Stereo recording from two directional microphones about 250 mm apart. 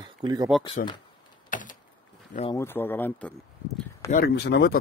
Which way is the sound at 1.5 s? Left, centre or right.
Left.